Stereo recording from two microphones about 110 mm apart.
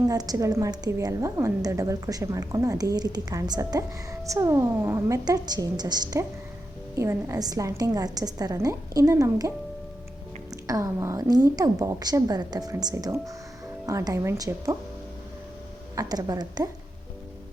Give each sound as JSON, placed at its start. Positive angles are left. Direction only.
{"t": 0.1, "sound": "a woman's voice", "side_deg": -35}
{"t": 6.9, "sound": "a woman's voice", "side_deg": -25}
{"t": 10.5, "sound": "a woman's voice", "side_deg": -30}
{"t": 16.0, "sound": "a woman's voice", "side_deg": -35}